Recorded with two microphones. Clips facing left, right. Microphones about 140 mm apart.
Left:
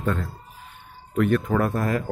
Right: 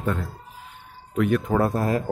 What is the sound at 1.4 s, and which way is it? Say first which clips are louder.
Speech: right 1 dB; 30° right (ahead or behind).